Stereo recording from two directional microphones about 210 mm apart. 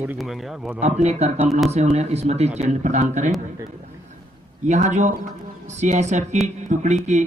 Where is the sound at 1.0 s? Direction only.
30° right (ahead or behind).